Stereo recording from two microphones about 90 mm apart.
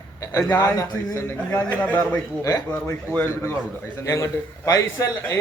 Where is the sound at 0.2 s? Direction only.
45° left (ahead or behind).